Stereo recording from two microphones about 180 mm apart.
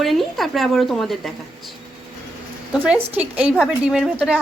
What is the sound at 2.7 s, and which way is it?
A woman's voice, 10° right (ahead or behind).